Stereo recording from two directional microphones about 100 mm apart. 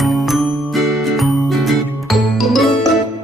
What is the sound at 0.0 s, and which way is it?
Music, centre (ahead or behind).